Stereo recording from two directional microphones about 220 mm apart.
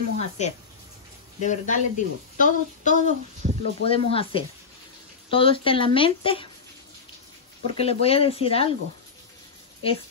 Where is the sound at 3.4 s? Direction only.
35° right (ahead or behind).